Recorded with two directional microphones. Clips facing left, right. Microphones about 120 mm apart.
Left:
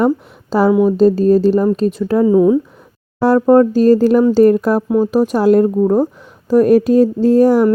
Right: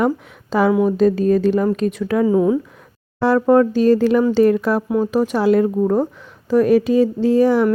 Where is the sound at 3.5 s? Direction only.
40° left (ahead or behind).